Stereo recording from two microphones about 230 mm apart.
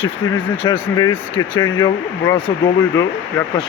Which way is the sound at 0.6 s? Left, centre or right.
Centre.